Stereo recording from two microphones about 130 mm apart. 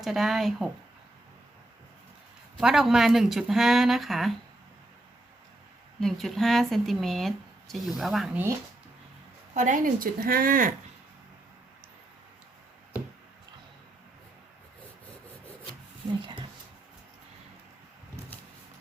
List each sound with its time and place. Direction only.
0.0 s speech: centre (ahead or behind)
2.6 s speech: 5° right (ahead or behind)
6.0 s speech: centre (ahead or behind)
9.6 s a woman's voice: 85° right